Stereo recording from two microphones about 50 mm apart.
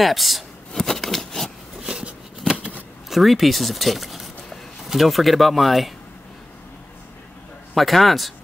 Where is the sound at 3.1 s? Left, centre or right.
Centre.